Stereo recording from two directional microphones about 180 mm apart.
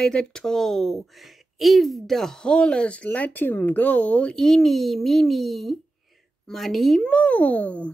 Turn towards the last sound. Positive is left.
turn(degrees=10)  # may be behind; listen again after turning